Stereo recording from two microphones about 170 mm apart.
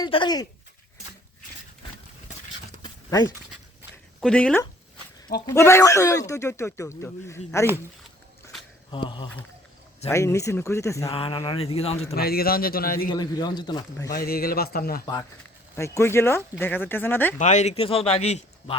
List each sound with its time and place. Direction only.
0.0 s speech: 25° left (ahead or behind)
2.8 s dog: 20° left (ahead or behind)
4.2 s speech: 5° left (ahead or behind)
5.5 s speech: 15° left (ahead or behind)
8.9 s speech: 30° left (ahead or behind)
10.1 s speech: 15° left (ahead or behind)
11.1 s speech: 30° left (ahead or behind)
12.1 s speech: 65° left (ahead or behind)
13.1 s speech: 25° left (ahead or behind)
14.2 s speech: 60° left (ahead or behind)
15.7 s speech: 15° left (ahead or behind)
17.3 s speech: 45° left (ahead or behind)